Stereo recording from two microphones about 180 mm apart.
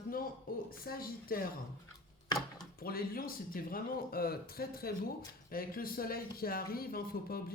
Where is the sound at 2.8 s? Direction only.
55° left (ahead or behind).